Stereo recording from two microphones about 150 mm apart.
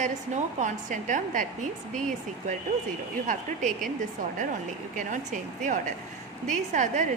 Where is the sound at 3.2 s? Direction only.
55° right (ahead or behind).